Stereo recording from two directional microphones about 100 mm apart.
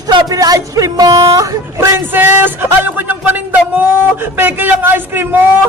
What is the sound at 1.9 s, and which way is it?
Music, 20° right (ahead or behind).